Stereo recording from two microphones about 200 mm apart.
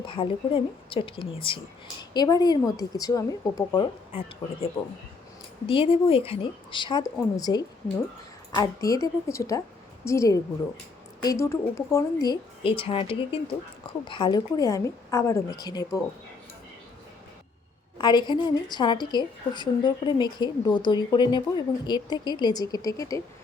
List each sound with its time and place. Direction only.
0.0 s a woman's voice: 25° left (ahead or behind)
5.6 s a woman's voice: 25° left (ahead or behind)
17.9 s a woman's voice: 20° left (ahead or behind)